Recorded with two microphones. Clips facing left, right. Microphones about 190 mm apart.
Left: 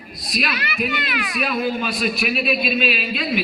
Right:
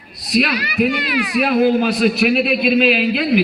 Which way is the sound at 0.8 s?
70° right (ahead or behind).